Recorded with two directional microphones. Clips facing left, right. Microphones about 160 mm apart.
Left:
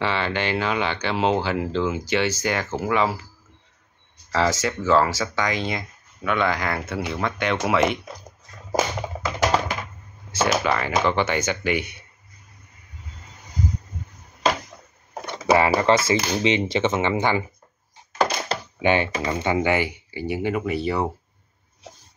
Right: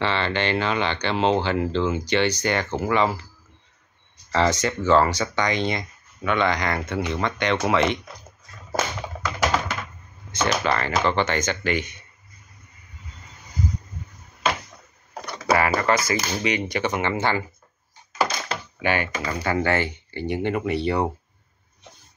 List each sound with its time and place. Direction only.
0.0 s speech: 5° left (ahead or behind)
4.3 s speech: 5° left (ahead or behind)
10.3 s speech: 5° left (ahead or behind)
15.2 s a sound: 20° left (ahead or behind)
15.8 s speech: 25° left (ahead or behind); by 21.1 s 5° left (ahead or behind)